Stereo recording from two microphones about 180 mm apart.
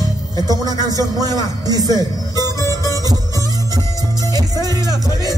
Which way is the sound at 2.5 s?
15° left (ahead or behind).